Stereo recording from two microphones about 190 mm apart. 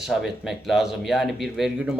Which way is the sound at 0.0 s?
Centre (ahead or behind).